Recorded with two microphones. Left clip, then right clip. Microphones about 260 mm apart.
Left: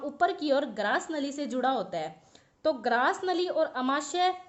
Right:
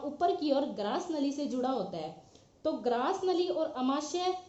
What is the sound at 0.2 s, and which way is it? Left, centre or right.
A woman's voice, left.